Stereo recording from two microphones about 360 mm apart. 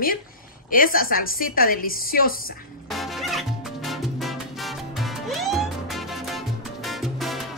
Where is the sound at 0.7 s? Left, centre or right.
Left.